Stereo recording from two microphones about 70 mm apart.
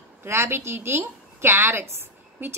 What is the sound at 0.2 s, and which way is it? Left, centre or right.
A woman's voice, right.